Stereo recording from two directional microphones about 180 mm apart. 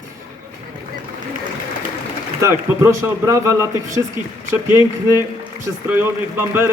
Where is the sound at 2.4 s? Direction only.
15° right (ahead or behind).